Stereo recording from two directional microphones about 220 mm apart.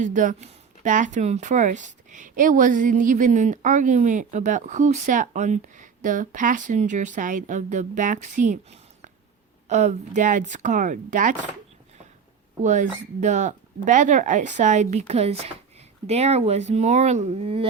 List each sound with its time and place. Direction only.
0.0 s speech: 35° right (ahead or behind)
12.6 s speech: 35° right (ahead or behind)